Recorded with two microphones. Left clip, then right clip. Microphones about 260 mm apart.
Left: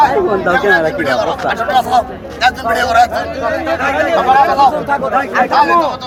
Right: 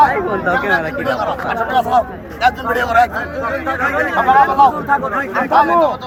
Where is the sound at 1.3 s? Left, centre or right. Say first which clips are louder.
Left 3 dB; right.